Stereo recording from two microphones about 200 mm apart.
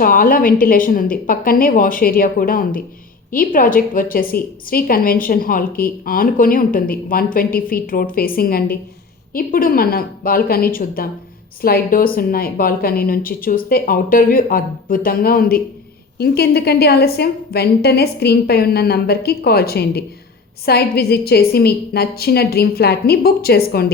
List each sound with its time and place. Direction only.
0.0 s a woman's voice: 45° left (ahead or behind)